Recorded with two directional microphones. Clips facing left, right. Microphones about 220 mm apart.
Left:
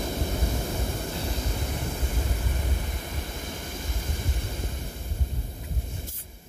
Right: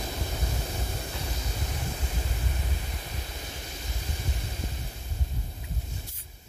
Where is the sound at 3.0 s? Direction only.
50° left (ahead or behind).